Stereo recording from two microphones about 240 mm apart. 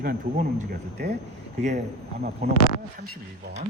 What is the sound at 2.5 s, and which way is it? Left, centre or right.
Speech, left.